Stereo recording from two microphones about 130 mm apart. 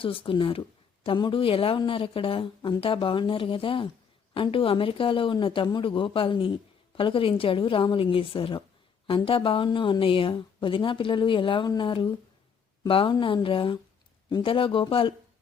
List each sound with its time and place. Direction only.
0.0 s a woman's voice: 45° left (ahead or behind)